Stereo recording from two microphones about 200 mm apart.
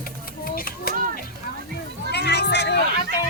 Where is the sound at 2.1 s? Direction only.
60° left (ahead or behind).